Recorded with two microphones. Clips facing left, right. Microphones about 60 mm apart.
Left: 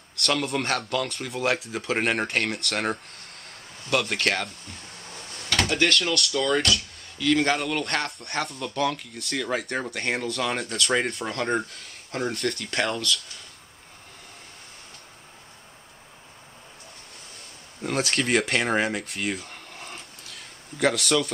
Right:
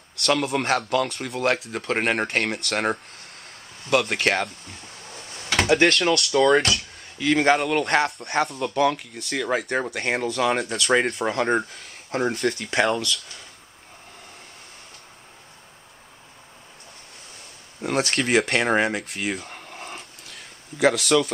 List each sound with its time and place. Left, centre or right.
0.2 s speech: centre
3.4 s a sound: centre
6.3 s speech: right
7.3 s speech: centre
17.8 s speech: centre